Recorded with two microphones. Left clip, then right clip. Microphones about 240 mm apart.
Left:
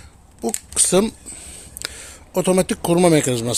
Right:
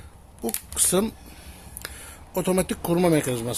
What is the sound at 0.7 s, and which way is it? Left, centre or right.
Speech, left.